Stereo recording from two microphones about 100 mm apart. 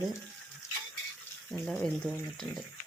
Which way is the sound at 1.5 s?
5° left (ahead or behind).